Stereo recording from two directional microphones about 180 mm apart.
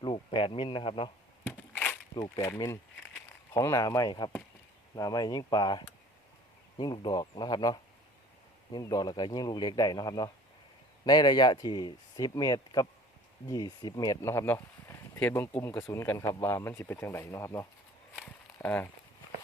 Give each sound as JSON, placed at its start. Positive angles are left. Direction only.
{"t": 0.0, "sound": "speech", "side_deg": 30}
{"t": 1.5, "sound": "crushing", "side_deg": 5}
{"t": 2.1, "sound": "speech", "side_deg": 20}